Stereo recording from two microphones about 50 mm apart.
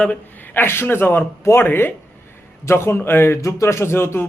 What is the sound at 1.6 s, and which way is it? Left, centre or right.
Speech, left.